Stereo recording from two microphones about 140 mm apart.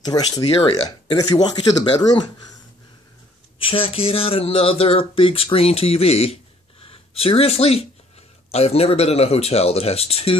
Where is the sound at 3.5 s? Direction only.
40° left (ahead or behind).